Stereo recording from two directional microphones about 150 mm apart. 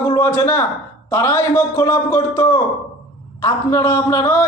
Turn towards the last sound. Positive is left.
turn(degrees=15)  # may be behind; listen again after turning